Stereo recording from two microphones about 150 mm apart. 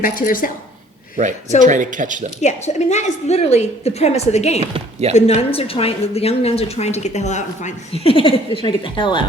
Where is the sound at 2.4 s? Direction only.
50° left (ahead or behind); by 9.2 s 35° left (ahead or behind).